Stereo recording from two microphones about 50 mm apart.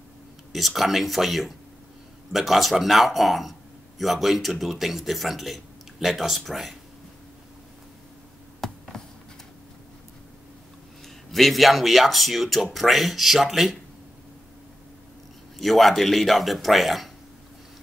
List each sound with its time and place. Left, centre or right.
0.5 s speech: centre
8.5 s a sound: centre
11.3 s speech: centre
15.6 s speech: centre